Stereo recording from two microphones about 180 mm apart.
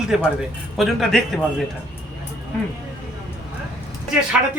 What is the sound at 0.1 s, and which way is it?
A man's voice, 5° right (ahead or behind).